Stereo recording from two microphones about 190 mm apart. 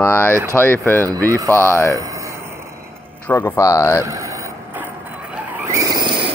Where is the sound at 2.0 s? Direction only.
15° right (ahead or behind).